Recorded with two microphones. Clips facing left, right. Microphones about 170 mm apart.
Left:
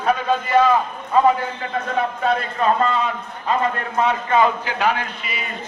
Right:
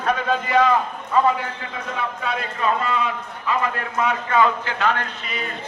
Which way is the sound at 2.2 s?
40° left (ahead or behind).